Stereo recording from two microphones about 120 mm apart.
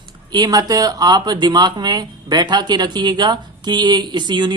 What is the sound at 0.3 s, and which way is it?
Speech, 35° right (ahead or behind).